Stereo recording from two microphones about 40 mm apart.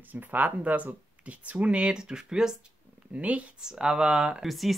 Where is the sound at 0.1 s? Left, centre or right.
Right; by 2.5 s centre.